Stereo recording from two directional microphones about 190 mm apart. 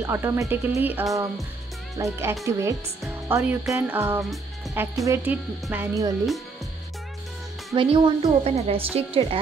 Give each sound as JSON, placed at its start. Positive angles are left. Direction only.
{"t": 0.0, "sound": "speech", "side_deg": -15}
{"t": 4.2, "sound": "speech", "side_deg": 0}
{"t": 5.0, "sound": "speech", "side_deg": -10}
{"t": 7.7, "sound": "a woman's voice", "side_deg": -25}